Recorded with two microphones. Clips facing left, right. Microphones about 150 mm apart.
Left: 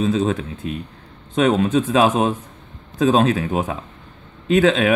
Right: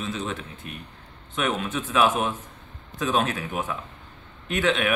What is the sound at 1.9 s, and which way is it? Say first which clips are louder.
Speech: left 1 dB; 35° left (ahead or behind).